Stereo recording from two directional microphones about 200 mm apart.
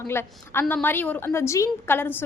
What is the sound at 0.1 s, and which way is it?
A woman's voice, 10° left (ahead or behind).